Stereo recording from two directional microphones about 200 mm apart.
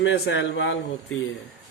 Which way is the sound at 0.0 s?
70° left (ahead or behind).